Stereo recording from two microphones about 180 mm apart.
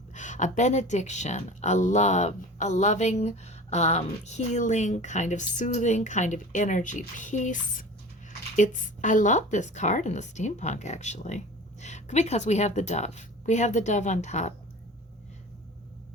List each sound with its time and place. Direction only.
0.1 s speech: 45° left (ahead or behind)
7.2 s drip: 45° left (ahead or behind)
8.5 s speech: 45° left (ahead or behind)